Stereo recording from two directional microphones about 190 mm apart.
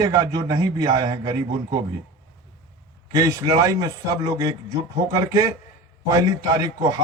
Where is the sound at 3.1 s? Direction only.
20° right (ahead or behind).